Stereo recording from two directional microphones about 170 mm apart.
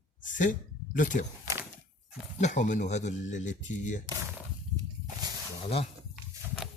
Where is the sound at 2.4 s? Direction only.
45° left (ahead or behind).